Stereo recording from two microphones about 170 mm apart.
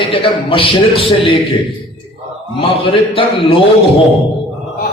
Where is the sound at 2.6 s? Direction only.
30° left (ahead or behind).